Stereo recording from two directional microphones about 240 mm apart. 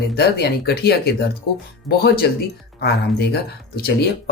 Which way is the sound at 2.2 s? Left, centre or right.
Left.